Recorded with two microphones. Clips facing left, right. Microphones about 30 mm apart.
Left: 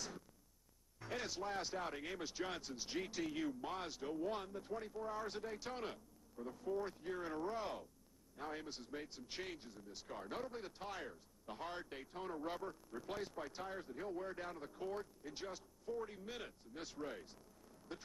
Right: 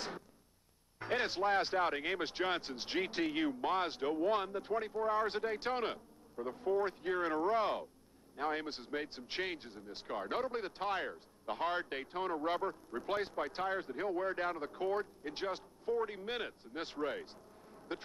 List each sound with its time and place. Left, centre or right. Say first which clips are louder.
0.9 s speech: right 9 dB; right